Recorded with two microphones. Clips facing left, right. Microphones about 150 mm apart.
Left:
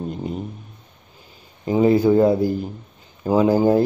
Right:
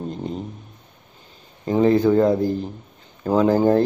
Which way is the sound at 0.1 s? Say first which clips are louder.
Left 1 dB; 5° left (ahead or behind).